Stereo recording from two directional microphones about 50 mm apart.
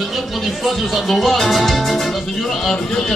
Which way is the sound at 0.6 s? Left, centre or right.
Centre.